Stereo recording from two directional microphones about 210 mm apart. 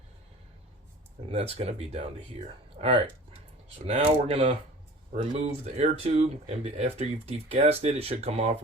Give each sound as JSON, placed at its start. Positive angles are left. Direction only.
{"t": 1.3, "sound": "speech", "side_deg": -30}